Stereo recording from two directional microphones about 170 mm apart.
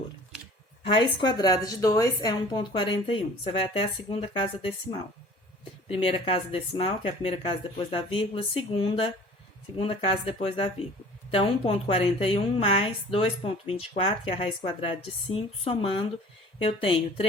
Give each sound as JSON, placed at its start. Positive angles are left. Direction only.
{"t": 0.9, "sound": "a woman's voice", "side_deg": 25}
{"t": 5.9, "sound": "speech", "side_deg": 35}